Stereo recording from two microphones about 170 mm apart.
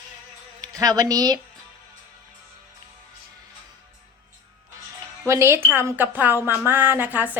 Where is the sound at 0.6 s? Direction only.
20° right (ahead or behind).